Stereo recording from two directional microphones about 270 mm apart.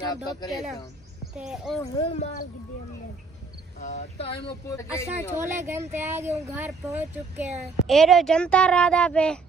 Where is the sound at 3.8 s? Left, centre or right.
Left.